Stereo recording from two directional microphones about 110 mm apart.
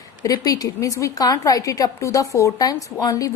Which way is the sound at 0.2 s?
35° left (ahead or behind).